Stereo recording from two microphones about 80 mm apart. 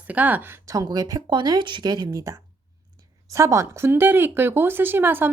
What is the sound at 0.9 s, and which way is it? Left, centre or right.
Speech, right.